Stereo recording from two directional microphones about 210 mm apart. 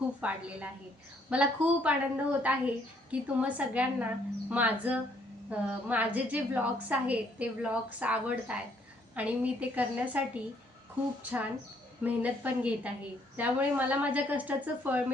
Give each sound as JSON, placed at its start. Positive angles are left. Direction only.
{"t": 0.2, "sound": "a woman's voice", "side_deg": -5}